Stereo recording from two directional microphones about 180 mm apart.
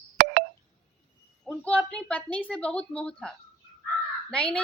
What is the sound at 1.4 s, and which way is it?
Speech, 5° left (ahead or behind).